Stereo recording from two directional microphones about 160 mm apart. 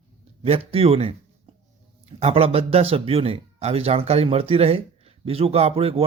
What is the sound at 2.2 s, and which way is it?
A man's voice, 40° right (ahead or behind).